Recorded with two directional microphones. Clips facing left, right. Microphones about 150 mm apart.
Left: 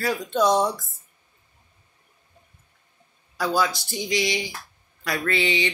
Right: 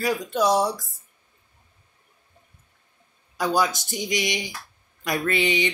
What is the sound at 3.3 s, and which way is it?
Speech, 20° right (ahead or behind).